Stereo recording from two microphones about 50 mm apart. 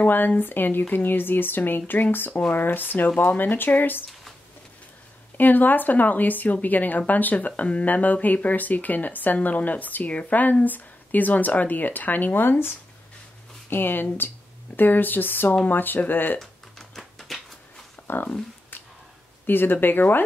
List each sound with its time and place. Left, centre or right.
0.0 s speech: left
5.4 s speech: left
16.3 s typing: centre
18.0 s speech: left
19.4 s speech: left